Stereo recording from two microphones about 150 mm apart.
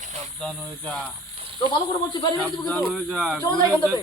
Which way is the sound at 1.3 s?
40° right (ahead or behind).